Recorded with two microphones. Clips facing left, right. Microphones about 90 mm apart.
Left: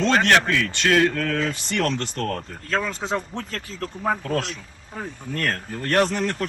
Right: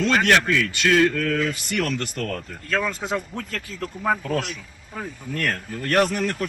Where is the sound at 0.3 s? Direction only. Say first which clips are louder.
Even; 40° left (ahead or behind).